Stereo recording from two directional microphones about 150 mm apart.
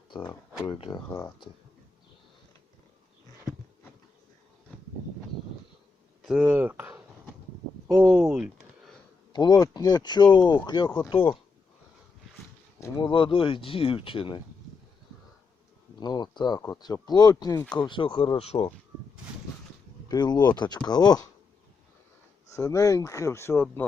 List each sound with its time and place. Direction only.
0.7 s speech: 30° left (ahead or behind)
6.2 s speech: 10° right (ahead or behind)
8.1 s speech: 5° right (ahead or behind)
9.3 s speech: 30° left (ahead or behind)
13.0 s speech: 35° left (ahead or behind)
16.0 s speech: 30° left (ahead or behind)
18.3 s speech: 45° left (ahead or behind)
20.1 s speech: 30° left (ahead or behind)
22.5 s speech: 20° left (ahead or behind)